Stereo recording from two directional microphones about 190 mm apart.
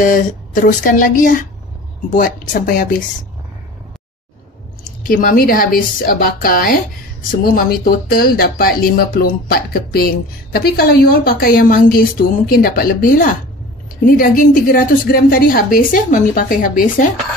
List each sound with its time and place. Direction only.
0.0 s a woman's voice: 45° left (ahead or behind)
5.0 s a woman's voice: 50° left (ahead or behind)